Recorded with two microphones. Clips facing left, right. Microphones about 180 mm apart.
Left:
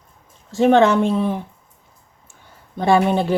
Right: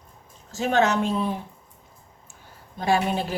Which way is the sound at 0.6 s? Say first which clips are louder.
Left 8 dB; 55° left (ahead or behind).